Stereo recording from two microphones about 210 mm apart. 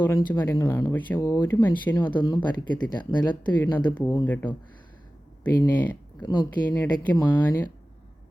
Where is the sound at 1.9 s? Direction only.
20° left (ahead or behind).